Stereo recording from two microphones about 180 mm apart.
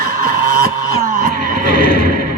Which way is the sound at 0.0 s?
55° right (ahead or behind).